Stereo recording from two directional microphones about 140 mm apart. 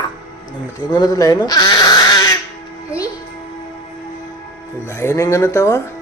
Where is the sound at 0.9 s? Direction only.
30° left (ahead or behind).